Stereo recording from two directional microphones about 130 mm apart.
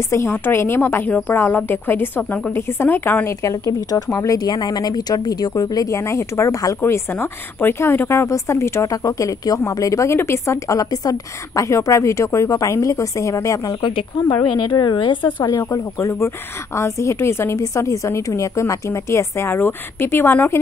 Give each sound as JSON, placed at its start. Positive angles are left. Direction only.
{"t": 0.1, "sound": "a woman's voice", "side_deg": 20}
{"t": 13.7, "sound": "a woman's voice", "side_deg": 40}
{"t": 15.2, "sound": "a woman's voice", "side_deg": 20}